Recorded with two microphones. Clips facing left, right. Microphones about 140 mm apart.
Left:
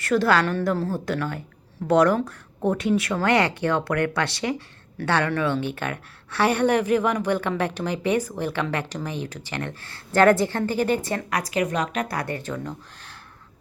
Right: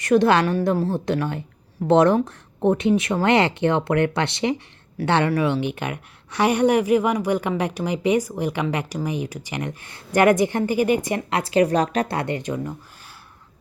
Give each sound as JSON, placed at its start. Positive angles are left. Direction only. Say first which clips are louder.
{"t": 0.0, "sound": "a woman's voice", "louder": "right 3 dB", "side_deg": -20}
{"t": 11.3, "sound": "speech", "louder": "right 7 dB", "side_deg": -25}